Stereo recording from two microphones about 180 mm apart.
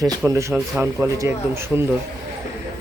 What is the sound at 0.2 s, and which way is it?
Speech, 20° right (ahead or behind).